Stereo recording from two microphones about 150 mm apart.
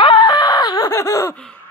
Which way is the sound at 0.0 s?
30° left (ahead or behind).